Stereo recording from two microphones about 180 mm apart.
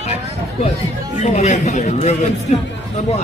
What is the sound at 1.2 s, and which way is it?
A man's voice, 40° left (ahead or behind).